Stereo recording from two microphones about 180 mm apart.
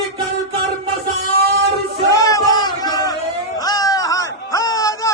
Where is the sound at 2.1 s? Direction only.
20° left (ahead or behind).